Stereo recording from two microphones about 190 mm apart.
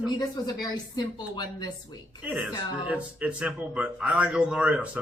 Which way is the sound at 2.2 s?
5° right (ahead or behind).